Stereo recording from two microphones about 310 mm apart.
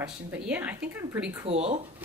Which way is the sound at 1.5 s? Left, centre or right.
Centre.